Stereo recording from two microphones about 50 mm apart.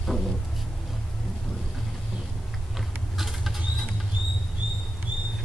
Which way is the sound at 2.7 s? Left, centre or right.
Centre.